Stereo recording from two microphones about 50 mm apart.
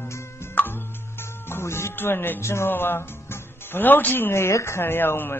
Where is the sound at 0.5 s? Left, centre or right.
Left.